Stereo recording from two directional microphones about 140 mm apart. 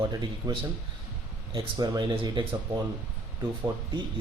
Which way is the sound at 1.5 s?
30° right (ahead or behind).